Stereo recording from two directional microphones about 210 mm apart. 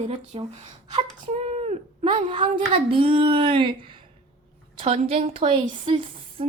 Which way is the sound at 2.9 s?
25° right (ahead or behind).